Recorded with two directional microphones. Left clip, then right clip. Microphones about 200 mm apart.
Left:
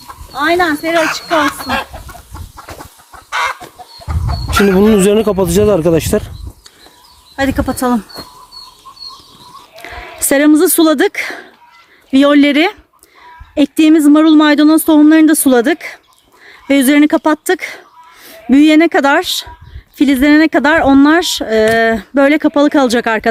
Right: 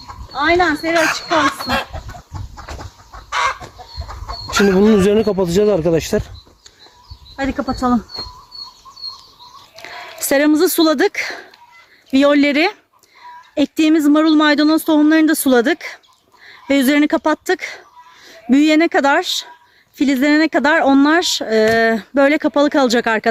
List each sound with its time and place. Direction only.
0.3 s speech: 30° left (ahead or behind)
1.3 s speech: 50° right (ahead or behind)
3.2 s chicken: 20° right (ahead or behind)
4.4 s chicken: 30° right (ahead or behind)
4.8 s speech: 10° left (ahead or behind)
7.3 s speech: 65° left (ahead or behind)
9.8 s speech: centre (ahead or behind)